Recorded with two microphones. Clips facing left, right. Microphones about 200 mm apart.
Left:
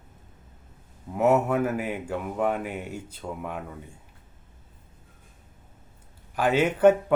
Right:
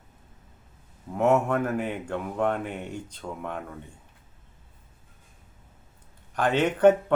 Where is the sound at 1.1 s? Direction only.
5° left (ahead or behind).